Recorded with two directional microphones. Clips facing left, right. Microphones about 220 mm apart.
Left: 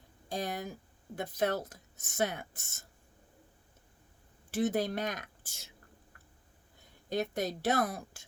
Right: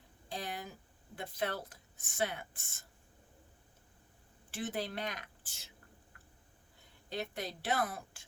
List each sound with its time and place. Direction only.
0.3 s a sound: 45° left (ahead or behind)
1.1 s speech: 45° left (ahead or behind)
4.5 s speech: 40° left (ahead or behind)
7.1 s speech: 45° left (ahead or behind)